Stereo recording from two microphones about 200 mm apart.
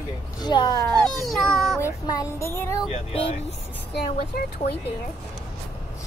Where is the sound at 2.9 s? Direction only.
30° left (ahead or behind).